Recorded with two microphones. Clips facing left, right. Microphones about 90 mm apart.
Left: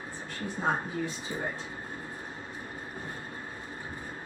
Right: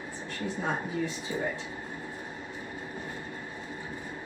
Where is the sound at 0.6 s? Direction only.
20° left (ahead or behind).